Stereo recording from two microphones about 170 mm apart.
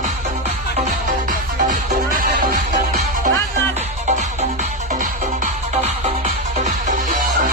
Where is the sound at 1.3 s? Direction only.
50° right (ahead or behind).